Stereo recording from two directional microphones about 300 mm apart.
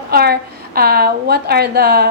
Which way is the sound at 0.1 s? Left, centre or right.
Right.